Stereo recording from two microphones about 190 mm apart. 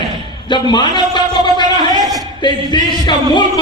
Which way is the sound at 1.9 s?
20° right (ahead or behind).